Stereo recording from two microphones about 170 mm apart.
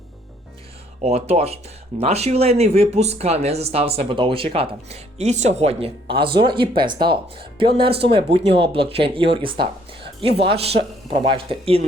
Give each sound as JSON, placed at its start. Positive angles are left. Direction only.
{"t": 1.0, "sound": "speech", "side_deg": -35}